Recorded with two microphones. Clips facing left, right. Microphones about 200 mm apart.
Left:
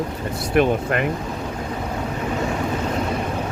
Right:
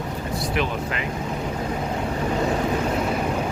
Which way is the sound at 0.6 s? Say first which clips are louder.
Left 11 dB; 55° left (ahead or behind).